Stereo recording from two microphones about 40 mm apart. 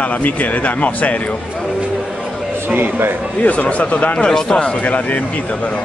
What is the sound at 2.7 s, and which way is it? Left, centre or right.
Speech, right.